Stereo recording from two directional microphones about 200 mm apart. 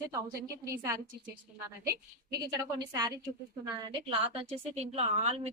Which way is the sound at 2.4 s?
20° right (ahead or behind).